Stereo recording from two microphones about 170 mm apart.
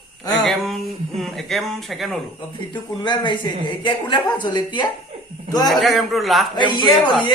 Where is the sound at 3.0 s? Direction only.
25° left (ahead or behind).